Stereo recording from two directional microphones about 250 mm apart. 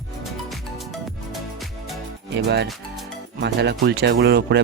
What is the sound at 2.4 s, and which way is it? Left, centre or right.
Speech, right.